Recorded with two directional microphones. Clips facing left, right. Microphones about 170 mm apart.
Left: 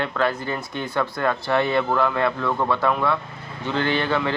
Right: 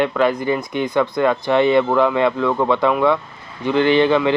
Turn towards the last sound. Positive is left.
turn(degrees=-15)  # may be behind; listen again after turning